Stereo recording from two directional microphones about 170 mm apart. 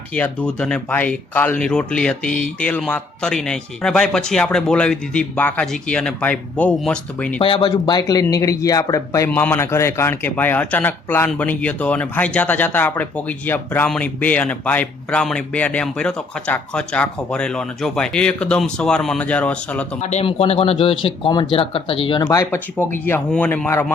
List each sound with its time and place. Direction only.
0.1 s speech: 5° left (ahead or behind)
7.4 s speech: 25° left (ahead or behind); by 19.8 s 10° left (ahead or behind)
20.0 s speech: 40° left (ahead or behind); by 23.8 s 10° left (ahead or behind)